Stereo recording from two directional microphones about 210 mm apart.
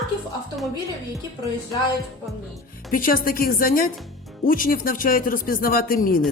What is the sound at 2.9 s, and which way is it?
Speech, 40° left (ahead or behind).